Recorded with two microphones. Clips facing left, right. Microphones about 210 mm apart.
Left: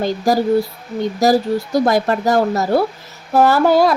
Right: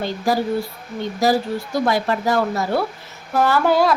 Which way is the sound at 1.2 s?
40° left (ahead or behind).